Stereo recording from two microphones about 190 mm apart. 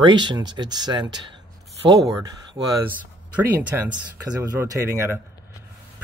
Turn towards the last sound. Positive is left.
turn(degrees=-15)  # may be behind; listen again after turning